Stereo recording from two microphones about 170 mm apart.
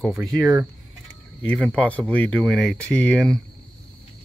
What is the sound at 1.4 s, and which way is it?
Speech, 5° left (ahead or behind).